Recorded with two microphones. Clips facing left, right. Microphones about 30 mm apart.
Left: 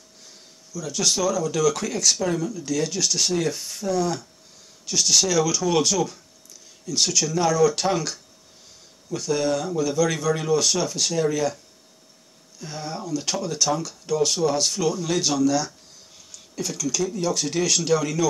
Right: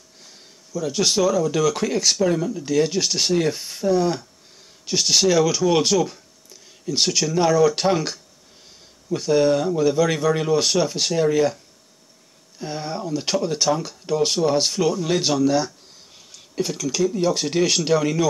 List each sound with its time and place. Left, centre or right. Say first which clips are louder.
0.7 s speech: right 4 dB; right
6.0 s a sound: right 2 dB; right
7.1 s speech: right 4 dB; right
12.5 s speech: right 4 dB; right
16.3 s a sound: right 5 dB; right
17.1 s speech: right 4 dB; right